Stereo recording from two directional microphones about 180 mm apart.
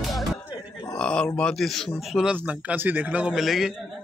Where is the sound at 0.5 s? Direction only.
20° left (ahead or behind).